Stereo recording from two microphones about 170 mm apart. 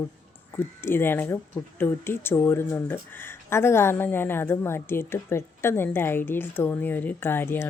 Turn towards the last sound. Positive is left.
turn(degrees=15)  # may be behind; listen again after turning